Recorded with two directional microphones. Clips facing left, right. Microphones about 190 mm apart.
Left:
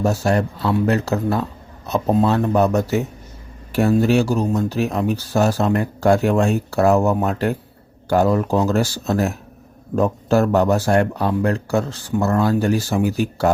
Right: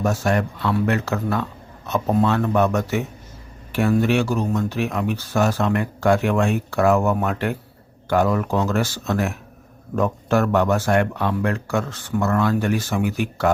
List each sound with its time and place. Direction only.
0.0 s speech: 30° left (ahead or behind)
3.7 s a sound: 40° left (ahead or behind)
4.0 s speech: 35° left (ahead or behind)